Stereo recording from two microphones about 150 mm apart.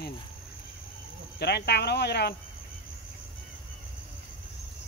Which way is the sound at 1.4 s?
90° left.